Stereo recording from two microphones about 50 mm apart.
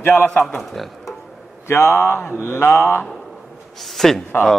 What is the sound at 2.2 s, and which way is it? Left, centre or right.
Mantra, left.